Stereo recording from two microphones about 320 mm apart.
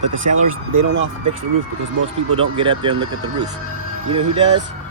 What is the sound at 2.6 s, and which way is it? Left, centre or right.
Speech, centre.